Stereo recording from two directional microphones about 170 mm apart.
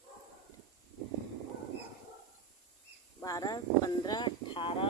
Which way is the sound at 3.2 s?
20° left (ahead or behind).